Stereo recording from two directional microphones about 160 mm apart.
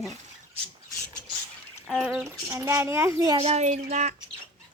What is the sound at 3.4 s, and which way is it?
Speech, 40° right (ahead or behind).